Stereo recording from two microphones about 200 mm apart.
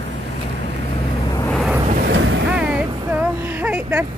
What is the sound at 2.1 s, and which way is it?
Boat, 70° right (ahead or behind).